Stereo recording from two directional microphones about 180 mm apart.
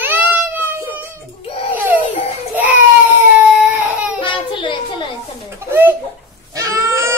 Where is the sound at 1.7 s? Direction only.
10° right (ahead or behind).